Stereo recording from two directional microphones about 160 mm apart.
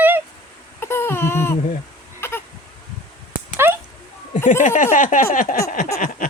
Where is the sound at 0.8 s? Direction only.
15° left (ahead or behind).